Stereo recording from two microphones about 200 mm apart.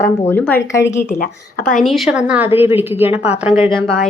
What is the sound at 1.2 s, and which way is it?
Speech, 45° left (ahead or behind).